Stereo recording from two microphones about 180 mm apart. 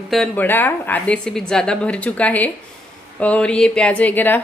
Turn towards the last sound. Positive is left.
turn(degrees=10)  # may be behind; listen again after turning